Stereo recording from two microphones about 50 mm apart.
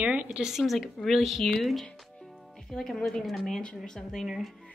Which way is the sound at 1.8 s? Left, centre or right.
Centre.